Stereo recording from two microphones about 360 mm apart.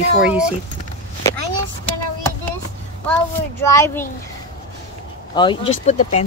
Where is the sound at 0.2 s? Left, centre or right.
Centre.